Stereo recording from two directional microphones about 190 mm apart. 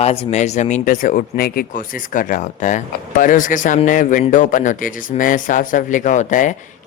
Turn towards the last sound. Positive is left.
turn(degrees=40)  # may be behind; listen again after turning